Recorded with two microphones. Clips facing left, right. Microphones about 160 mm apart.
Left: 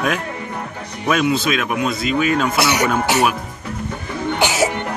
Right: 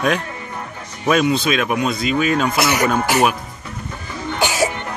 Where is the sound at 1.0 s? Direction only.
5° left (ahead or behind).